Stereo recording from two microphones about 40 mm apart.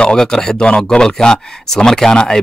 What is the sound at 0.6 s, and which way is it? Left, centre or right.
Speech, left.